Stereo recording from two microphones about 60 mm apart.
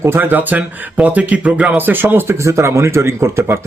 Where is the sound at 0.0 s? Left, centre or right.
Right.